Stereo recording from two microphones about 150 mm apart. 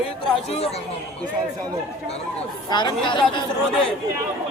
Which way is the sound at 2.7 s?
30° left (ahead or behind).